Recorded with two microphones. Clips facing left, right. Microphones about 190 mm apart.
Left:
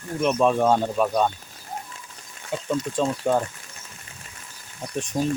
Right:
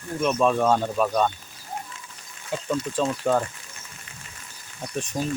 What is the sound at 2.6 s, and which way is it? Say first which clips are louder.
Speech: left 1 dB; 10° left (ahead or behind).